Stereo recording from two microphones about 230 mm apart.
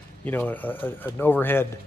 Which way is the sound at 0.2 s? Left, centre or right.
Centre.